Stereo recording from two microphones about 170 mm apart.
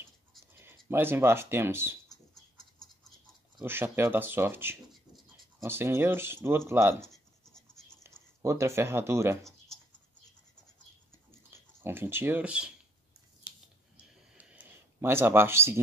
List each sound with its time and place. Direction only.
0.6 s speech: 15° right (ahead or behind)
3.6 s speech: 10° right (ahead or behind)
7.1 s scratch: 5° left (ahead or behind)
8.4 s speech: 15° right (ahead or behind)
11.5 s speech: 15° right (ahead or behind)
13.9 s a sound: 10° right (ahead or behind)